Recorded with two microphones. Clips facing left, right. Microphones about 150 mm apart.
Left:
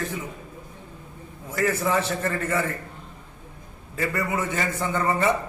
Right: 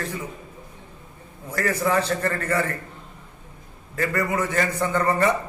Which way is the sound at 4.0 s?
10° left (ahead or behind).